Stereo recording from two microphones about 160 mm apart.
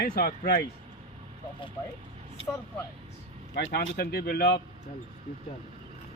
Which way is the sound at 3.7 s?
80° left.